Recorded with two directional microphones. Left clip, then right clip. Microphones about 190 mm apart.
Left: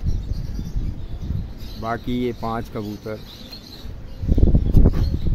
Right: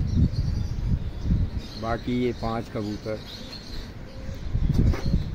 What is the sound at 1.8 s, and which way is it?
Speech, 20° left (ahead or behind).